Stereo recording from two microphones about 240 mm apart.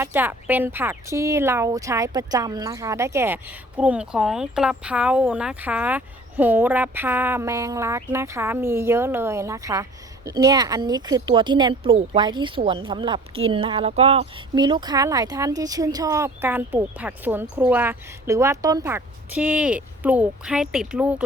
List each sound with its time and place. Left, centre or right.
0.0 s speech: centre